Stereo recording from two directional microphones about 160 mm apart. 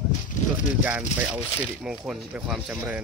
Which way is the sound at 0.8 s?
10° right (ahead or behind).